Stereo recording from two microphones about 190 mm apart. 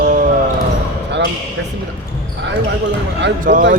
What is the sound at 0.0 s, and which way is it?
Basketball bounce, 45° right (ahead or behind).